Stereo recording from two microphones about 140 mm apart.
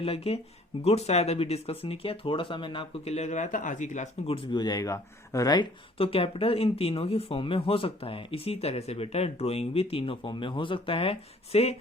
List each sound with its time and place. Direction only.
0.0 s speech: 45° left (ahead or behind)
4.5 s speech: 30° left (ahead or behind)
6.0 s speech: 40° left (ahead or behind)